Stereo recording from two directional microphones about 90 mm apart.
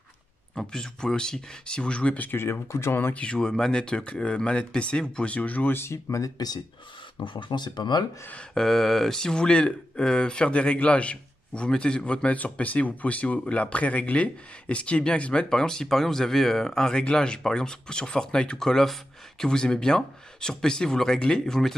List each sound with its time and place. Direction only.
0.6 s speech: 5° left (ahead or behind); by 6.6 s 45° left (ahead or behind)
7.2 s speech: 60° left (ahead or behind)
8.5 s speech: 5° left (ahead or behind)